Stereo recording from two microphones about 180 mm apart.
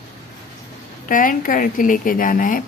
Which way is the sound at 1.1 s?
50° left (ahead or behind).